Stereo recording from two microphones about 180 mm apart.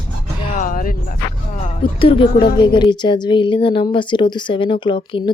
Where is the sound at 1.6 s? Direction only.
30° left (ahead or behind).